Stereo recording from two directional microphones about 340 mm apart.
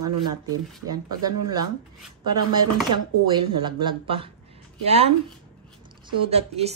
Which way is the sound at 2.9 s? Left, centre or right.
Centre.